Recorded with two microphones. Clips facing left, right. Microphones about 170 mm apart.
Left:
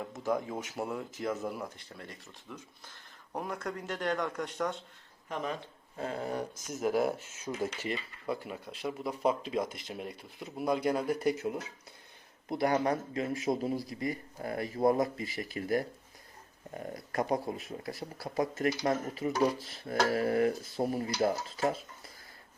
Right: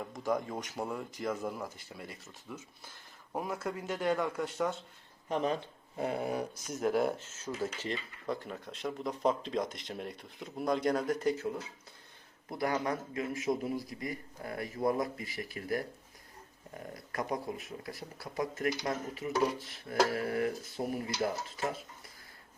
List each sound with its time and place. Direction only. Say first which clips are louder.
0.0 s speech: left 1 dB; centre (ahead or behind)
5.3 s speech: right 4 dB; 30° right (ahead or behind)
6.0 s speech: right 2 dB; 10° right (ahead or behind)
6.7 s speech: left 1 dB; centre (ahead or behind)
12.5 s speech: left 4 dB; 25° left (ahead or behind)
17.1 s speech: left 4 dB; 30° left (ahead or behind)